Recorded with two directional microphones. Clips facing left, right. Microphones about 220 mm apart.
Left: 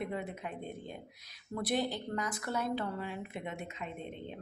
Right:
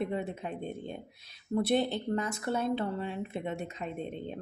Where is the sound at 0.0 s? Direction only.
25° right (ahead or behind).